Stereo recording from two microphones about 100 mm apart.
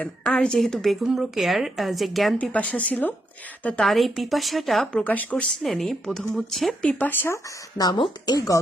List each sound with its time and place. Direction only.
0.0 s speech: 10° left (ahead or behind)
2.4 s speech: 15° left (ahead or behind)
3.8 s speech: centre (ahead or behind)
4.9 s speech: 15° left (ahead or behind)
5.6 s speech: centre (ahead or behind)
7.0 s speech: 20° left (ahead or behind)
7.8 s speech: 40° left (ahead or behind)